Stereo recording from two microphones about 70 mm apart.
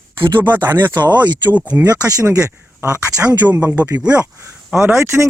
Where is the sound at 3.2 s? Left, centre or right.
Right.